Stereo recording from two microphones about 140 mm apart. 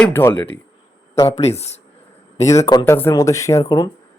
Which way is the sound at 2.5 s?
25° left (ahead or behind).